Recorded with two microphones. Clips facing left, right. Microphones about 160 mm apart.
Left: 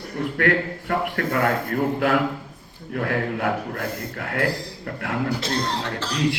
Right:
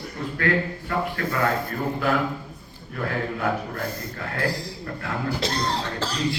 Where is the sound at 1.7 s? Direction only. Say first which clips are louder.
Left 3 dB; 70° left (ahead or behind).